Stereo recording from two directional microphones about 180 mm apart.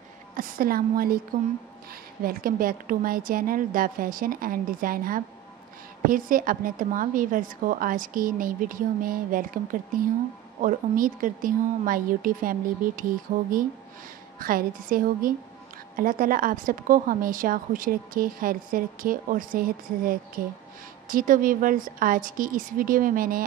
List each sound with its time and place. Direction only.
0.4 s a woman's voice: 55° right (ahead or behind)
2.2 s a woman's voice: 55° right (ahead or behind)
14.4 s a woman's voice: 50° right (ahead or behind)